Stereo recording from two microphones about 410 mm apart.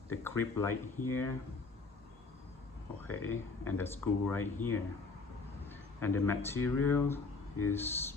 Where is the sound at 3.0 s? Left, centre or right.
Left.